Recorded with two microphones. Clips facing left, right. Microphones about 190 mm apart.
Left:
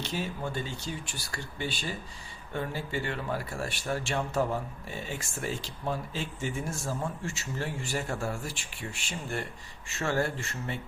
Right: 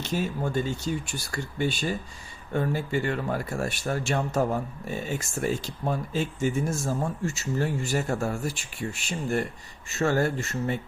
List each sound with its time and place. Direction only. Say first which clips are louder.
0.0 s speech: right 5 dB; 45° right (ahead or behind)